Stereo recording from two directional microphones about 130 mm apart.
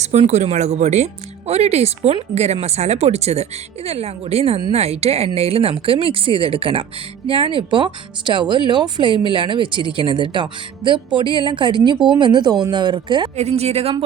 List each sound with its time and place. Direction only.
0.0 s speech: 60° right (ahead or behind); by 13.3 s 35° right (ahead or behind)
13.3 s speech: 55° right (ahead or behind)